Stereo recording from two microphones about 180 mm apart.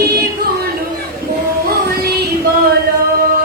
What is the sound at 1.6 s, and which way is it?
Child singing, 60° right (ahead or behind).